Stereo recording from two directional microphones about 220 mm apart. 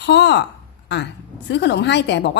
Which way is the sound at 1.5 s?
50° left (ahead or behind).